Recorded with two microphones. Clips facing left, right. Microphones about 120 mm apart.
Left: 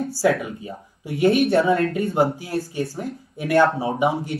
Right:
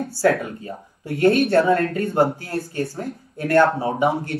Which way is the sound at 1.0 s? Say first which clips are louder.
Right 2 dB; 60° right (ahead or behind).